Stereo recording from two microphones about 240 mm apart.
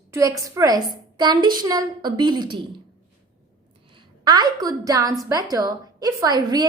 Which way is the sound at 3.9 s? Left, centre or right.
Centre.